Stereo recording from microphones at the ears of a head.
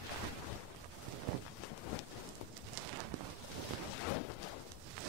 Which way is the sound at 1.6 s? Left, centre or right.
Left.